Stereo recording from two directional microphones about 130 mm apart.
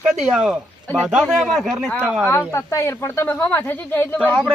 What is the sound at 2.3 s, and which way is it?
Speech, 20° left (ahead or behind).